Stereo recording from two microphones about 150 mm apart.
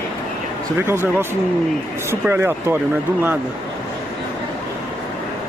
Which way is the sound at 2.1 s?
15° right (ahead or behind).